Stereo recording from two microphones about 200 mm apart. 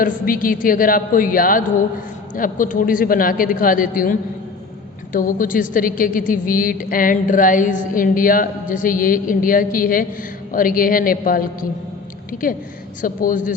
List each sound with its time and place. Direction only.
0.0 s a woman's voice: 45° left (ahead or behind)
13.0 s a man's voice: 40° left (ahead or behind)